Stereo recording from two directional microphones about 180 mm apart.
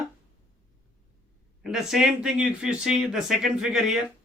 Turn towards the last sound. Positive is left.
turn(degrees=-5)  # may be behind; listen again after turning